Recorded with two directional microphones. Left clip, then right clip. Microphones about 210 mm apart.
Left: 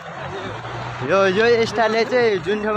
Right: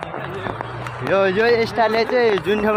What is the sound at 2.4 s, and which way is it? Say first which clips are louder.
Speech: right 3 dB; 20° right (ahead or behind).